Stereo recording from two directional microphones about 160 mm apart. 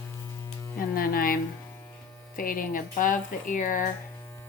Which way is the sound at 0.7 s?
65° left (ahead or behind).